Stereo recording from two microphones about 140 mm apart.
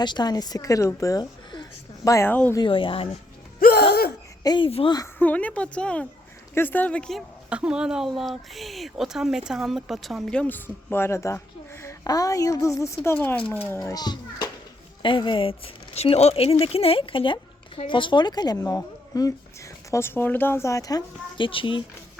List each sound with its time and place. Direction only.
0.0 s a woman's voice: 30° left (ahead or behind)
2.0 s a woman's voice: 20° left (ahead or behind)
2.6 s speech: 40° left (ahead or behind)
3.6 s gasp: 90° left
4.4 s speech: 35° left (ahead or behind)
5.2 s a woman's voice: 10° left (ahead or behind); by 21.8 s 35° left (ahead or behind)